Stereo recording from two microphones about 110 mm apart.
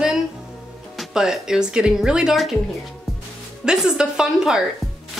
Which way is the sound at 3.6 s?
5° right (ahead or behind).